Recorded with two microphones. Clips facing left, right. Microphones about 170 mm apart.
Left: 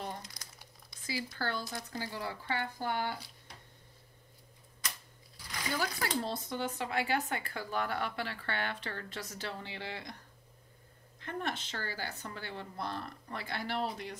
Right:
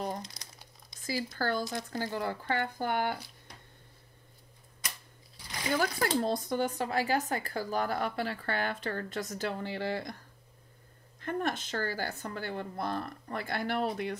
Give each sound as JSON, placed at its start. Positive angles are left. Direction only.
{"t": 0.2, "sound": "crumpling", "side_deg": -20}
{"t": 1.0, "sound": "a woman's voice", "side_deg": -45}
{"t": 5.7, "sound": "speech", "side_deg": -50}
{"t": 11.1, "sound": "a woman's voice", "side_deg": -45}